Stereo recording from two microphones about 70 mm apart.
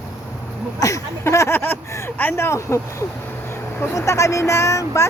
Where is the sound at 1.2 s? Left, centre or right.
Left.